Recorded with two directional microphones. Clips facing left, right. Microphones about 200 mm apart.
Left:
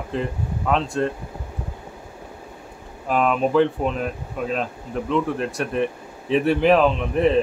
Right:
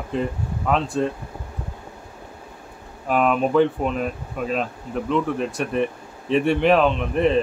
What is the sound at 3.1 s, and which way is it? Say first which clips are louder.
Speech: even; centre (ahead or behind).